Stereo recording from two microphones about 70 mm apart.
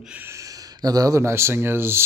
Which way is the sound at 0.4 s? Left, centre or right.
Right.